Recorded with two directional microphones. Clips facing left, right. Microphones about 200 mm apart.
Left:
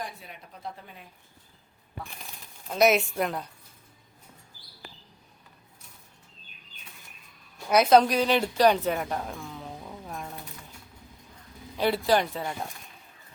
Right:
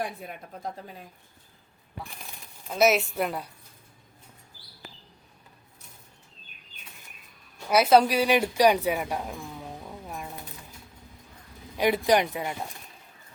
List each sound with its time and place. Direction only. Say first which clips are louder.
0.0 s speech: right 5 dB; 50° right (ahead or behind)
2.6 s a woman's voice: even; centre (ahead or behind)
7.7 s a woman's voice: even; 5° right (ahead or behind)
11.8 s speech: right 2 dB; 15° right (ahead or behind)